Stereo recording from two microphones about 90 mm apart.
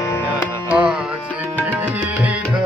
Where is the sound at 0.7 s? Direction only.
15° right (ahead or behind).